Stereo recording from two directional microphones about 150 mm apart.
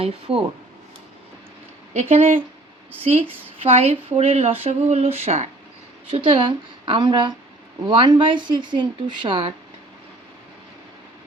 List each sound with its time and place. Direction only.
0.0 s a woman's voice: 40° right (ahead or behind)
1.9 s a woman's voice: 45° right (ahead or behind)